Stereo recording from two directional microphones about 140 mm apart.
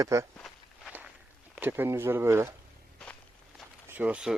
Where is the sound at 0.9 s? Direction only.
10° right (ahead or behind).